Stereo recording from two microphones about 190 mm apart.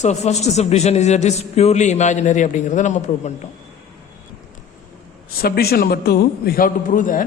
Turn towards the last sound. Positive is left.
turn(degrees=45)  # may be behind; listen again after turning